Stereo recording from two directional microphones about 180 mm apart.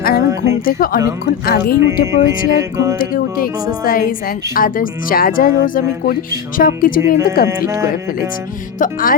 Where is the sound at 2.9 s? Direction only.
50° left (ahead or behind).